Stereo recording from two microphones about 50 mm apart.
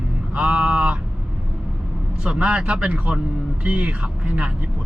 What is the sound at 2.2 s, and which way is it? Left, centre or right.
Speech, centre.